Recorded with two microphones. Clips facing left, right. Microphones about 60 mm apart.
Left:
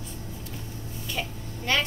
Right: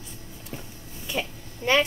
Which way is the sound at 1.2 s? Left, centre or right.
Centre.